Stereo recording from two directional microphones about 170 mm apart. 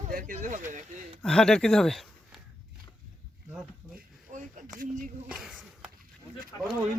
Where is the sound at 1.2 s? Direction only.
5° left (ahead or behind).